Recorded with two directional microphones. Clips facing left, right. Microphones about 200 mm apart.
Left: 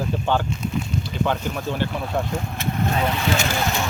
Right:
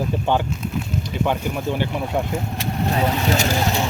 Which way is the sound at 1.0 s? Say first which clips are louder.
Right 3 dB; 15° right (ahead or behind).